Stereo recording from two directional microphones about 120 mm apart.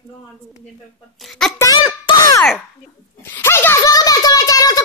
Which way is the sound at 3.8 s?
30° left (ahead or behind).